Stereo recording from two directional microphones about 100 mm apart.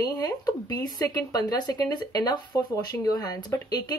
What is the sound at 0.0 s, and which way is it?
Speech, 40° left (ahead or behind).